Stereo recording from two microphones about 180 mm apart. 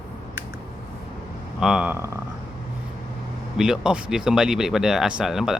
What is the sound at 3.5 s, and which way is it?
Speech, 5° right (ahead or behind).